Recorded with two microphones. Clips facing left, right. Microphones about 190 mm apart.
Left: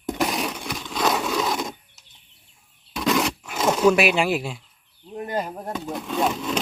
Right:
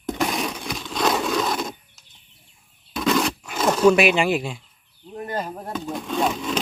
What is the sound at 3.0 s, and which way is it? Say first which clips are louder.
Wild animals: right 1 dB; 5° left (ahead or behind).